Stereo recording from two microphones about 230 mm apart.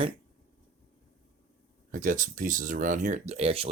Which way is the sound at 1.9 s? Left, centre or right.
Right.